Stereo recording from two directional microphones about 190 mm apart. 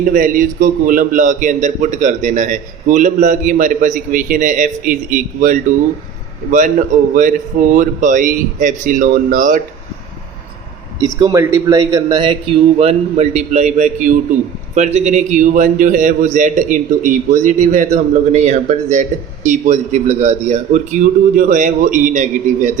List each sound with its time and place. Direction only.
0.0 s a man's voice: 45° right (ahead or behind)
11.0 s a man's voice: 20° right (ahead or behind); by 22.7 s 40° right (ahead or behind)